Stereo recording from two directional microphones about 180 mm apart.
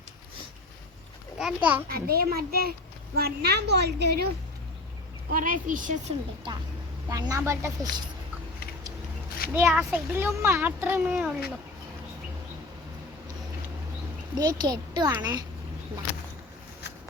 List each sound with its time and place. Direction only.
1.4 s a child's voice: 5° right (ahead or behind)
1.9 s a woman's voice: 55° right (ahead or behind)
5.3 s a woman's voice: 50° right (ahead or behind)
7.1 s a child's voice: 20° right (ahead or behind)
9.5 s a child's voice: 10° right (ahead or behind)
14.3 s speech: 20° right (ahead or behind)